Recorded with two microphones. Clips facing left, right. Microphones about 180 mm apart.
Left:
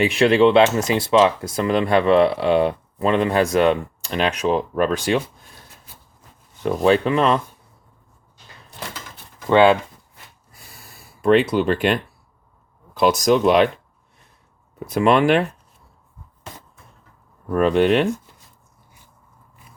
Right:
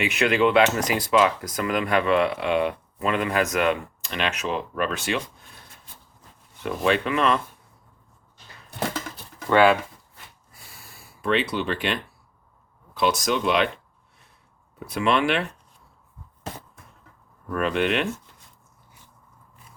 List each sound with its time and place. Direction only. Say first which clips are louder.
0.0 s speech: left 6 dB; 30° left (ahead or behind)
6.6 s speech: left 6 dB; 35° left (ahead or behind)
9.5 s speech: left 4 dB; 25° left (ahead or behind)
11.2 s speech: left 8 dB; 45° left (ahead or behind)
14.8 s speech: left 6 dB; 45° left (ahead or behind)
17.5 s speech: left 7 dB; 35° left (ahead or behind)